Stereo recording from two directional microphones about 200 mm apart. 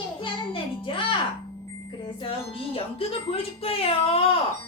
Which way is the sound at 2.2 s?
25° left (ahead or behind).